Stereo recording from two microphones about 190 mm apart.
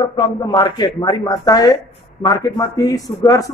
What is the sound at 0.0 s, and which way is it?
A woman's voice, 25° left (ahead or behind).